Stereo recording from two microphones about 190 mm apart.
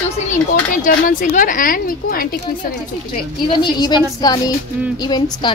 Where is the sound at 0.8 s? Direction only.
45° left (ahead or behind).